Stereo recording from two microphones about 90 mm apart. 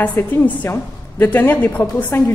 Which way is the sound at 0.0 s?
20° left (ahead or behind).